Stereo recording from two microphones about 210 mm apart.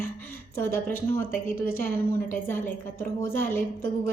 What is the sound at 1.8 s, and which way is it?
A woman's voice, 10° left (ahead or behind).